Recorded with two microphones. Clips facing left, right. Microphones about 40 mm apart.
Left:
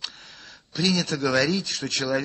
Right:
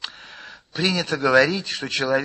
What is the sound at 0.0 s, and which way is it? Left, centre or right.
Speech, right.